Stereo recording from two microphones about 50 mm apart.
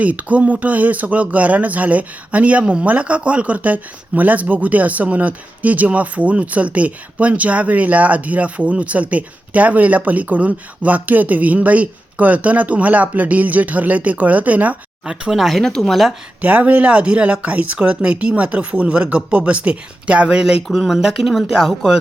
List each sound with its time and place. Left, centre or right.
0.0 s speech: right
15.0 s speech: centre
16.4 s speech: right
20.7 s speech: centre